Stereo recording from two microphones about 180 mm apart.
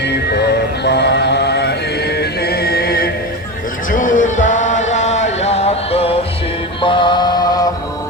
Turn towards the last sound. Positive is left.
turn(degrees=20)  # may be behind; listen again after turning